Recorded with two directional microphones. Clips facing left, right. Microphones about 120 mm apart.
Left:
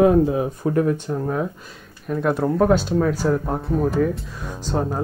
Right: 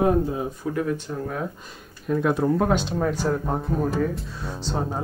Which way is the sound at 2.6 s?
Centre (ahead or behind).